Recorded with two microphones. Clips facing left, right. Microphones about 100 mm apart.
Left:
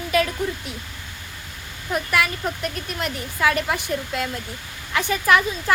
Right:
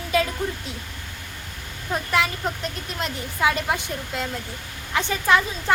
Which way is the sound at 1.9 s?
25° right (ahead or behind).